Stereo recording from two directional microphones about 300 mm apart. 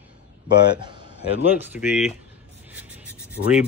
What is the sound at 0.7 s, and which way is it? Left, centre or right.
Speech, centre.